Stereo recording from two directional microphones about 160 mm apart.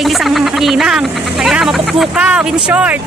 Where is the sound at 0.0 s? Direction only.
Centre (ahead or behind).